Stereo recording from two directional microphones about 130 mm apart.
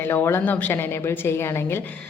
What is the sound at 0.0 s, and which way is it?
A woman's voice, 15° left (ahead or behind).